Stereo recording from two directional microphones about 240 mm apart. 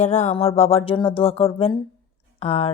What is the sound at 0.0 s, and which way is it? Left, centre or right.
Speech, left.